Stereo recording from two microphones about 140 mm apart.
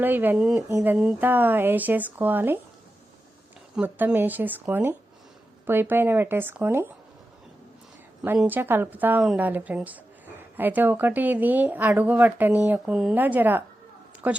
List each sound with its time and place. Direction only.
0.0 s speech: 15° right (ahead or behind)
0.7 s a sound: 25° right (ahead or behind)
0.9 s speech: 10° right (ahead or behind)
3.8 s speech: 10° right (ahead or behind)
8.4 s speech: 15° right (ahead or behind)